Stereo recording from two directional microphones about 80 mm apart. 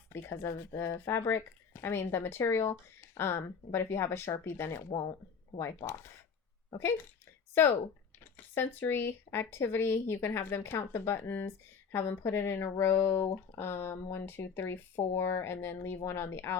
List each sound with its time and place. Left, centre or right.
0.1 s speech: left